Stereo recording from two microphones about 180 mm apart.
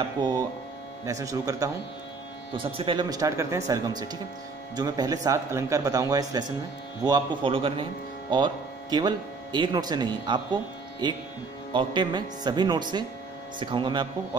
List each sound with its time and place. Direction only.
0.2 s speech: 25° right (ahead or behind)